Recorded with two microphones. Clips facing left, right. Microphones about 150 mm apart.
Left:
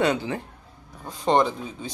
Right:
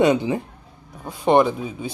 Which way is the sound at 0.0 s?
20° right (ahead or behind).